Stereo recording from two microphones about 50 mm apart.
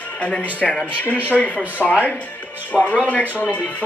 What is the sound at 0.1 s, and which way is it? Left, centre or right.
Speech, left.